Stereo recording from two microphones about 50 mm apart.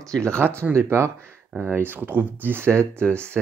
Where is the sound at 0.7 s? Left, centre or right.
Right.